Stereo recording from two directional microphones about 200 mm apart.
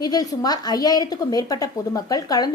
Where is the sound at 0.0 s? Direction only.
20° left (ahead or behind).